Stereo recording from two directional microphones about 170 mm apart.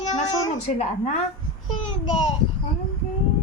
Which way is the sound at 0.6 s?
40° left (ahead or behind).